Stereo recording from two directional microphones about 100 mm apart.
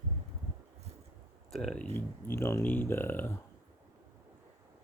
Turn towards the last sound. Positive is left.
turn(degrees=20)  # may be behind; listen again after turning